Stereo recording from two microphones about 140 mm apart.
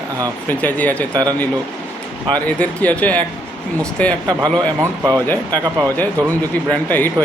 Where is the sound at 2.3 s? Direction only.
10° left (ahead or behind).